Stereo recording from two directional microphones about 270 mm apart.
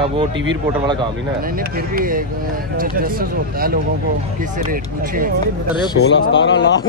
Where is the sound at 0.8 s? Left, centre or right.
Centre.